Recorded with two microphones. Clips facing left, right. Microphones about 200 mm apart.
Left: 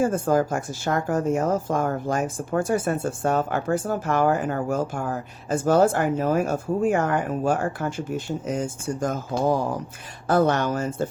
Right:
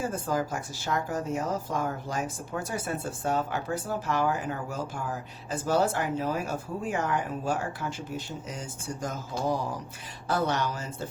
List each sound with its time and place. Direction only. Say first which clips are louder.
0.0 s speech: left 9 dB; 50° left (ahead or behind)